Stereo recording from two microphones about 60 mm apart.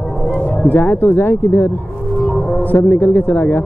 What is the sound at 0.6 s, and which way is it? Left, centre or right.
Speech, left.